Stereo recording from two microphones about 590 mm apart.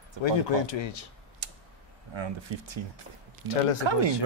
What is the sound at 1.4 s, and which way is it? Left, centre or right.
Tick-tock, right.